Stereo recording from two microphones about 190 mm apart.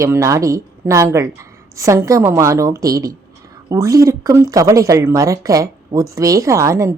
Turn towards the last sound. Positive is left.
turn(degrees=-15)  # may be behind; listen again after turning